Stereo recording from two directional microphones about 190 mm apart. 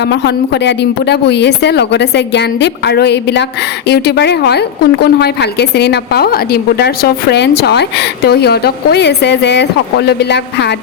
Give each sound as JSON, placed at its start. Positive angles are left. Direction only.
{"t": 0.0, "sound": "a woman's voice", "side_deg": 65}